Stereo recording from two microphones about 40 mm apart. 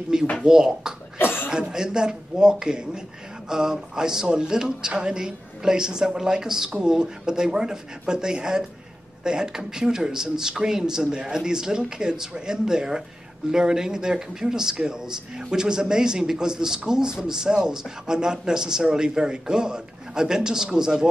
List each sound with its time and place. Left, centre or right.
0.4 s speech: centre
1.1 s cough: left
1.5 s speech: centre